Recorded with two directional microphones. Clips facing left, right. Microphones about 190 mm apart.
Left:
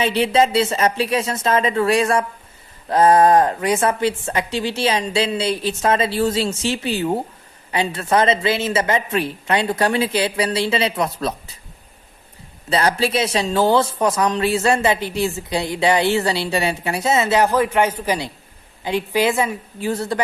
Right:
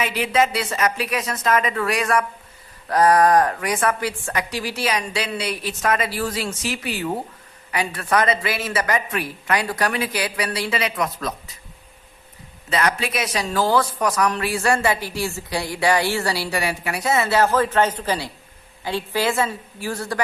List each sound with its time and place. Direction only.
0.0 s speech: 30° left (ahead or behind)
12.7 s a woman's voice: 30° left (ahead or behind)